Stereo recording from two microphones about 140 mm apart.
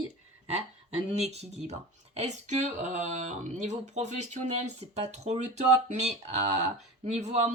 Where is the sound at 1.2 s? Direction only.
50° right (ahead or behind).